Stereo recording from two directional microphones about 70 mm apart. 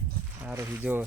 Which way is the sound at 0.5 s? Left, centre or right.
Right.